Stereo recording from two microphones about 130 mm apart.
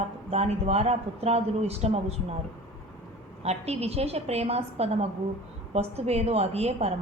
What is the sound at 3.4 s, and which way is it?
A woman's voice, 55° right (ahead or behind).